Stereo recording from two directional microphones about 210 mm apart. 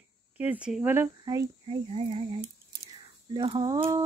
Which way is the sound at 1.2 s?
20° right (ahead or behind).